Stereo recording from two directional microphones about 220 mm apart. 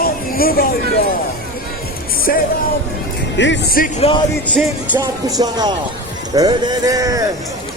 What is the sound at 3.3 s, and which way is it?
Speech, 55° left (ahead or behind).